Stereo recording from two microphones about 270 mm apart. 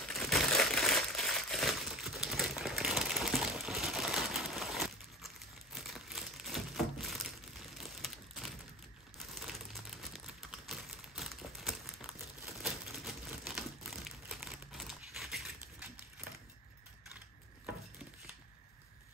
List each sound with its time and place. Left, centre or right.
0.1 s crumpling: centre
9.2 s typing: centre